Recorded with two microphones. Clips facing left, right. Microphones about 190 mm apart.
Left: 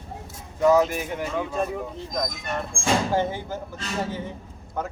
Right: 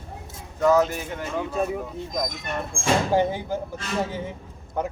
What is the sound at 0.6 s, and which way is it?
Speech, 10° left (ahead or behind).